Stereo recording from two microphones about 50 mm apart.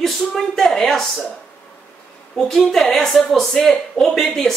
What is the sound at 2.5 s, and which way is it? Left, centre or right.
A man's voice, centre.